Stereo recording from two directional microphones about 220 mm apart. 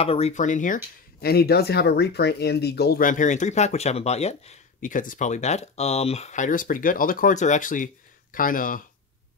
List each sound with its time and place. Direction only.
0.0 s speech: 25° left (ahead or behind)
1.2 s speech: 45° left (ahead or behind)